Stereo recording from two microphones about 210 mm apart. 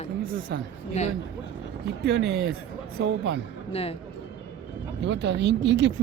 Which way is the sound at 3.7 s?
30° left (ahead or behind).